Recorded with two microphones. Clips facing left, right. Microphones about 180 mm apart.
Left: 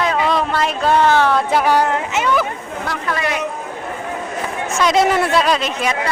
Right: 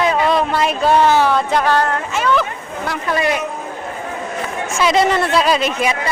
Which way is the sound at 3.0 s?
25° right (ahead or behind).